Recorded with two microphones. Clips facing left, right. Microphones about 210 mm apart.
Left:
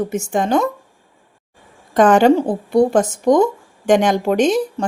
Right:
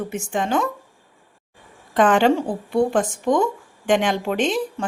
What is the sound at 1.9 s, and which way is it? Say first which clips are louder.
A woman's voice: left 5 dB; 40° left (ahead or behind).